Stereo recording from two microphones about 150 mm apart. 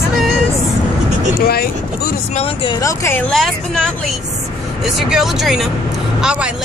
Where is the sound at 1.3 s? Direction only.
90° left.